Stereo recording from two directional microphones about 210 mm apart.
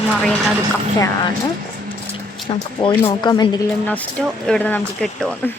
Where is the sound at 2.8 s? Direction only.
25° left (ahead or behind).